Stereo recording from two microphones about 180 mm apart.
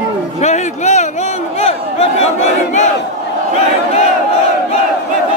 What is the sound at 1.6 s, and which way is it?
Battle cry, 35° left (ahead or behind).